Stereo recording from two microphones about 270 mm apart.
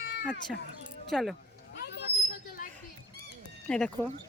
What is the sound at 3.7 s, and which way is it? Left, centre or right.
Speech, centre.